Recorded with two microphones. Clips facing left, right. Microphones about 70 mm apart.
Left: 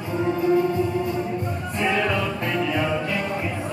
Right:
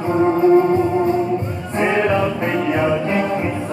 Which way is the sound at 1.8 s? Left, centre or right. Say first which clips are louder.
Right 6 dB; right.